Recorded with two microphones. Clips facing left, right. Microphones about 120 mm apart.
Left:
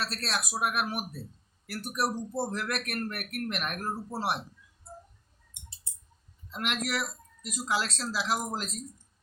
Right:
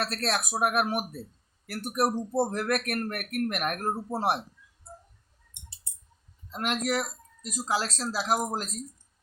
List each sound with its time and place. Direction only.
0.0 s speech: 55° right (ahead or behind)
6.5 s speech: 40° right (ahead or behind)